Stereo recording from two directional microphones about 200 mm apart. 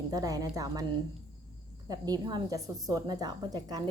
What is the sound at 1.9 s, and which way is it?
A woman's voice, 20° right (ahead or behind).